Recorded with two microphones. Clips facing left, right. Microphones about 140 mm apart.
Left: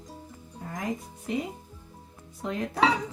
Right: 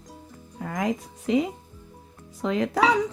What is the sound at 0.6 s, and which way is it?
Speech, 90° right.